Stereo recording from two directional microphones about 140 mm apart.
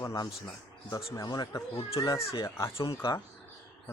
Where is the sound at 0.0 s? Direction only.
25° left (ahead or behind).